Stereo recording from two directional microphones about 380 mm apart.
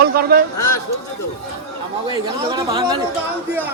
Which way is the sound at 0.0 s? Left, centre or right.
Right.